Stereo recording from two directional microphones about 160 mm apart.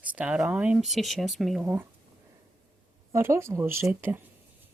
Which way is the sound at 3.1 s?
15° right (ahead or behind).